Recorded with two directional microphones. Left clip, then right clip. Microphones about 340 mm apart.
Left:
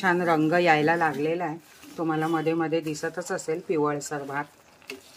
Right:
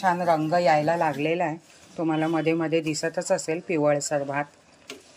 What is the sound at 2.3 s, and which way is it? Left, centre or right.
A woman's voice, centre.